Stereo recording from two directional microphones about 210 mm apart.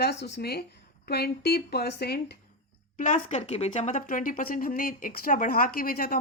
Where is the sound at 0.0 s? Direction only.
55° left (ahead or behind).